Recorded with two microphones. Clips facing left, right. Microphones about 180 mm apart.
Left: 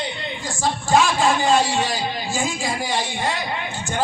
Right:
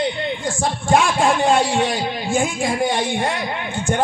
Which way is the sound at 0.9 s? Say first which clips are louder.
Right 1 dB; 55° right (ahead or behind).